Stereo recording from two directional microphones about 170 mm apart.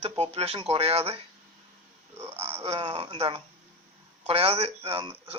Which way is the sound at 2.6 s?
35° right (ahead or behind).